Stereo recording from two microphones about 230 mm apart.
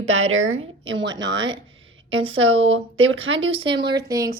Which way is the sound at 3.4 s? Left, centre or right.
Right.